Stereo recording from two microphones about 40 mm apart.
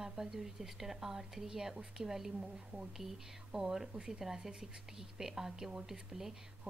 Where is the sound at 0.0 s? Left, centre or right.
Centre.